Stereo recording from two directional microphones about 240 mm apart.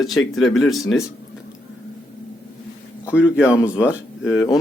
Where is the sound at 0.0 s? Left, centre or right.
Centre.